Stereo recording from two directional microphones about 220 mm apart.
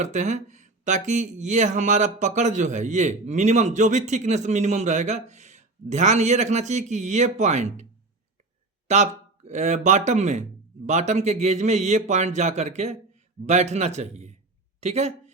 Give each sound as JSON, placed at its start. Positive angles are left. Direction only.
{"t": 0.0, "sound": "speech", "side_deg": -35}
{"t": 8.9, "sound": "speech", "side_deg": -30}